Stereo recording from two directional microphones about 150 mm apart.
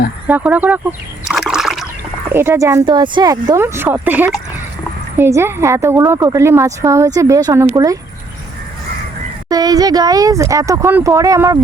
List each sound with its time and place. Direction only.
0.3 s speech: 10° right (ahead or behind)
2.3 s a woman's voice: 15° right (ahead or behind)
9.5 s a woman's voice: 25° right (ahead or behind)